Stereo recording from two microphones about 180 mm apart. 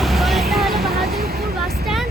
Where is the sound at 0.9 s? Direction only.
60° right (ahead or behind).